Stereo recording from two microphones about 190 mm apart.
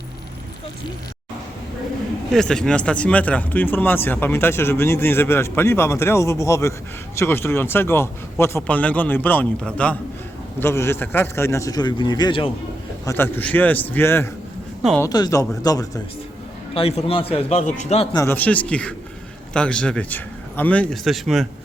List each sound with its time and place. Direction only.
2.3 s speech: 5° left (ahead or behind); by 12.5 s 25° left (ahead or behind)
13.1 s speech: 10° left (ahead or behind)
16.7 s a man's voice: 30° left (ahead or behind)
18.1 s a man's voice: 15° left (ahead or behind)